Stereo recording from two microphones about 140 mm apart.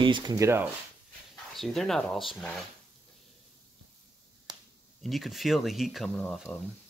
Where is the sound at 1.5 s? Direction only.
Centre (ahead or behind).